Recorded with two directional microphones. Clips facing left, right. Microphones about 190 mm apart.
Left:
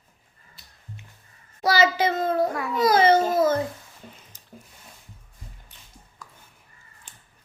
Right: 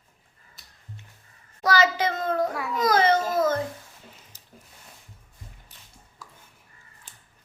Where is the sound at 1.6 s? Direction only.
30° left (ahead or behind).